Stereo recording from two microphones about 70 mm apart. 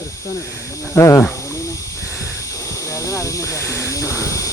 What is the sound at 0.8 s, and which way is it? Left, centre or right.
Speech, left.